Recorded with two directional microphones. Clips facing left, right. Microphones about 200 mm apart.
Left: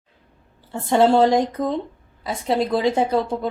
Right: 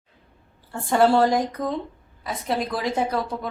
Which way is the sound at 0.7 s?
20° left (ahead or behind).